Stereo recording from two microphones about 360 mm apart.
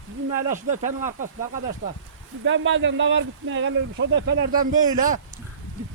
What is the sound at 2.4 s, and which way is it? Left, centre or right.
Speech, right.